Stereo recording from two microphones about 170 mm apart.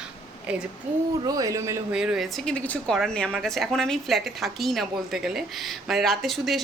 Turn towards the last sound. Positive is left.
turn(degrees=0)  # may be behind; listen again after turning